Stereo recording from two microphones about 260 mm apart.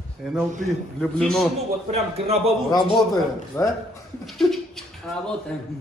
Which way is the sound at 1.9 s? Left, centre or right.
Right.